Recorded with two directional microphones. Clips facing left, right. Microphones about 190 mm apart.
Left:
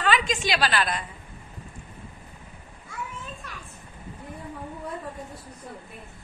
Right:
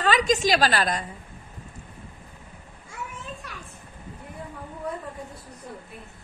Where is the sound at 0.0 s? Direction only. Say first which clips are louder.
Right 3 dB; 40° right (ahead or behind).